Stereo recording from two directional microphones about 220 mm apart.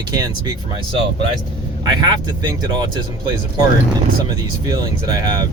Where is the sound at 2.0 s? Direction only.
20° right (ahead or behind).